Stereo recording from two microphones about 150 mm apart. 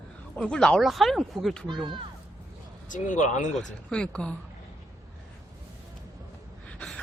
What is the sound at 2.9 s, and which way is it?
Speech, 55° left (ahead or behind).